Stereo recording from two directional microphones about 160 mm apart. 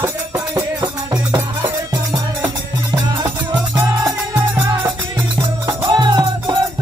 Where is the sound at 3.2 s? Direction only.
20° right (ahead or behind).